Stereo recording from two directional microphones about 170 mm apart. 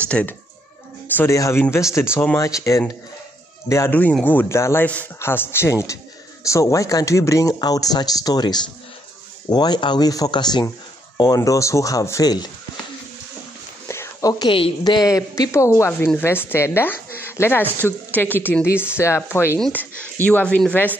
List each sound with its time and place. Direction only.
0.1 s speech: 5° left (ahead or behind)
13.8 s a sound: 20° left (ahead or behind)
14.5 s speech: 30° left (ahead or behind); by 20.9 s 10° left (ahead or behind)